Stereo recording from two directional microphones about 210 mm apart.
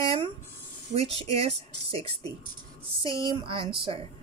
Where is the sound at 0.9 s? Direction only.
30° right (ahead or behind).